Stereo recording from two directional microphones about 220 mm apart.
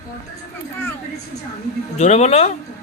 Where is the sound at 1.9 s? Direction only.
30° left (ahead or behind).